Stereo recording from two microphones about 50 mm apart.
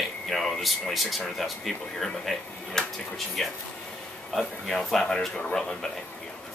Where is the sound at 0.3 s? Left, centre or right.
Centre.